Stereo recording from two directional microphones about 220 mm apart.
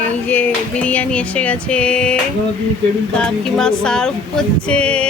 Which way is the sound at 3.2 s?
5° left (ahead or behind).